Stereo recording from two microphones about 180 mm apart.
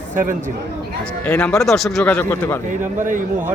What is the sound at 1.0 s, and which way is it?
Speech, 10° left (ahead or behind).